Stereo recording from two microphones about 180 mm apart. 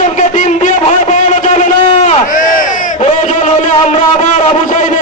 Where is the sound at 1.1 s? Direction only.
40° left (ahead or behind).